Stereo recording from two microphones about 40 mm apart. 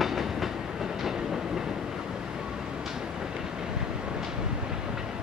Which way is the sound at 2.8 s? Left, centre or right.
Centre.